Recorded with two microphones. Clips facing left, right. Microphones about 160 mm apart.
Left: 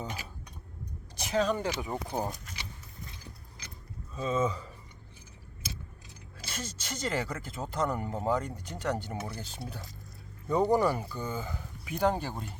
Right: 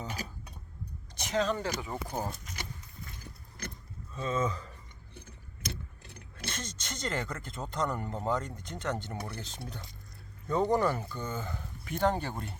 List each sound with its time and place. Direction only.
1.2 s speech: 10° left (ahead or behind)
3.6 s vehicle: 55° right (ahead or behind)
4.1 s speech: 10° left (ahead or behind)
6.5 s speech: 5° left (ahead or behind)